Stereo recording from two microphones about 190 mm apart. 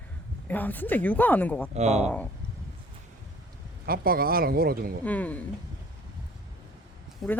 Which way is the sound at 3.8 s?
50° right (ahead or behind).